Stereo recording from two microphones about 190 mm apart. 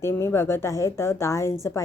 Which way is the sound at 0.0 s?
15° left (ahead or behind).